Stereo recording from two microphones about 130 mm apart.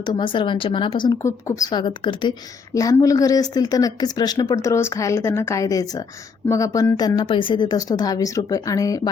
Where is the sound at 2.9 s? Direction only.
25° left (ahead or behind).